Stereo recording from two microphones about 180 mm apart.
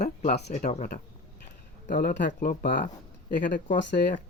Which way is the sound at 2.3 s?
50° left (ahead or behind).